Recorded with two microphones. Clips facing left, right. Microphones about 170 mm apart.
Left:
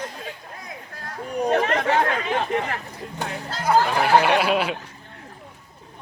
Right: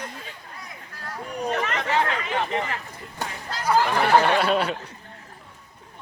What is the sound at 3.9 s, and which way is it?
Speech, 10° left (ahead or behind).